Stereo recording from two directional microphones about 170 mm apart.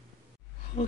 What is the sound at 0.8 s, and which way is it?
Speech, 35° left (ahead or behind).